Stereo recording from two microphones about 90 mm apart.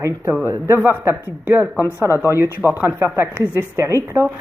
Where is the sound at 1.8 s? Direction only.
35° left (ahead or behind).